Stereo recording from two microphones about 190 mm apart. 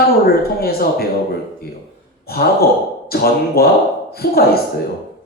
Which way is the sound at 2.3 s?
55° left (ahead or behind).